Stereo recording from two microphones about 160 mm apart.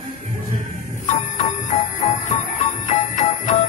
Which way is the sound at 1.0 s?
50° left (ahead or behind).